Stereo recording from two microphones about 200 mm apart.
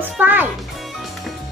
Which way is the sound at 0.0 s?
10° right (ahead or behind).